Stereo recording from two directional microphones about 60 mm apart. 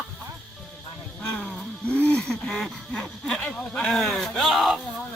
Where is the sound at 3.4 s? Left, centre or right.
Left.